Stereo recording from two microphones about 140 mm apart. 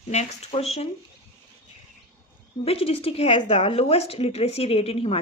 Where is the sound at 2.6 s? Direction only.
45° left (ahead or behind).